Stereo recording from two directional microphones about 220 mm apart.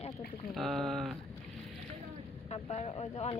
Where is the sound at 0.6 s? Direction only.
Centre (ahead or behind).